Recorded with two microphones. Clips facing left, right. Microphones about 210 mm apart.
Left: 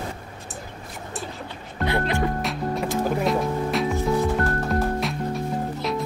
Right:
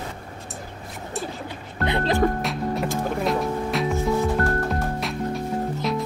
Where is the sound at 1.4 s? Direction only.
20° right (ahead or behind).